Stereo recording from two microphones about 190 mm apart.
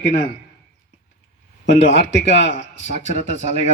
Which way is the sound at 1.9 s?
70° left (ahead or behind).